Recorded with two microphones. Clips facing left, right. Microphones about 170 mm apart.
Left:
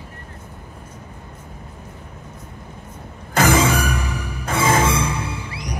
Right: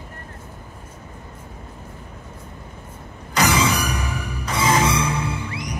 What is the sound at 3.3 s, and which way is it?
Music, 50° left (ahead or behind).